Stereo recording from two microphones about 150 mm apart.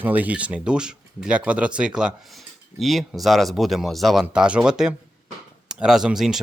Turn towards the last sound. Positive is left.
turn(degrees=0)  # may be behind; listen again after turning